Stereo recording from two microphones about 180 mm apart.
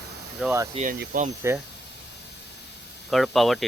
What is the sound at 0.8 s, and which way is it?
Speech, 35° right (ahead or behind).